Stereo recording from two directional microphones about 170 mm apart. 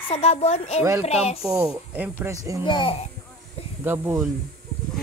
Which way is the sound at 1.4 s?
Centre (ahead or behind).